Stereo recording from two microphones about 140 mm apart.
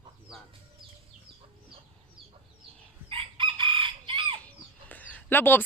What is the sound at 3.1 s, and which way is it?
Chicken, 35° right (ahead or behind).